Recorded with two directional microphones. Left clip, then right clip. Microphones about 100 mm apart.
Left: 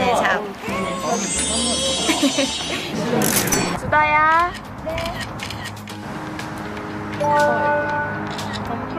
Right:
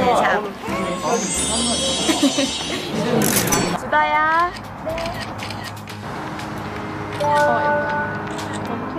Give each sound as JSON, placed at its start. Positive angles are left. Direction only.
{"t": 0.0, "sound": "speech", "side_deg": 10}
{"t": 3.9, "sound": "speech", "side_deg": 40}
{"t": 7.3, "sound": "speech", "side_deg": -15}